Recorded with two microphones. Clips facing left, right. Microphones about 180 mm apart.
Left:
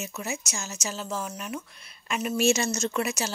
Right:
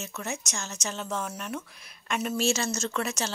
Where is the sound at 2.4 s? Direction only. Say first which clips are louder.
Left 6 dB; 15° left (ahead or behind).